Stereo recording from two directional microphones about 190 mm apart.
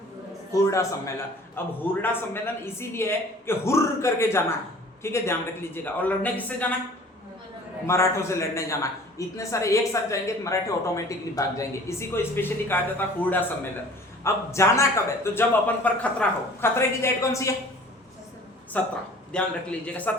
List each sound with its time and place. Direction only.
0.5 s a man's voice: 15° left (ahead or behind)
7.9 s a man's voice: 15° left (ahead or behind)
18.8 s a man's voice: 10° left (ahead or behind)